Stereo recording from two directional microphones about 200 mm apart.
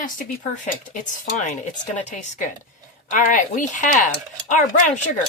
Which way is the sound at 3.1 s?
40° left (ahead or behind).